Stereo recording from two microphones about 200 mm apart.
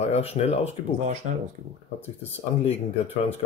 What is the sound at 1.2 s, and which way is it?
Speech, 35° right (ahead or behind).